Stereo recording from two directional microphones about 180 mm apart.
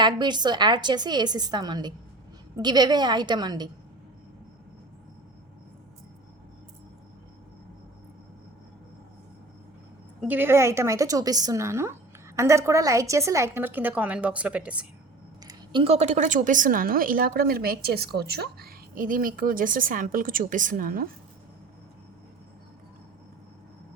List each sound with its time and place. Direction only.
0.0 s a woman's voice: 25° right (ahead or behind)
10.2 s a woman's voice: 10° right (ahead or behind)
15.4 s a woman's voice: 30° right (ahead or behind); by 21.1 s 55° right (ahead or behind)